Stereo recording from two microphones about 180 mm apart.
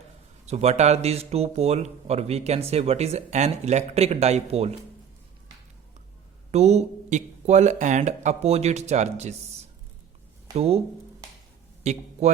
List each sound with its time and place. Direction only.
0.4 s speech: 35° right (ahead or behind)
6.5 s speech: 35° right (ahead or behind)
10.5 s a man's voice: 35° right (ahead or behind)